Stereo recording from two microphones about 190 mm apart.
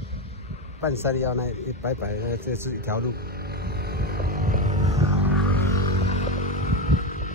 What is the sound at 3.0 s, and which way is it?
Vehicle, 55° right (ahead or behind).